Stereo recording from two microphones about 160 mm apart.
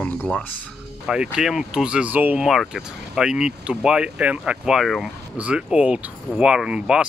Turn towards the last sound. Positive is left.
turn(degrees=-5)  # may be behind; listen again after turning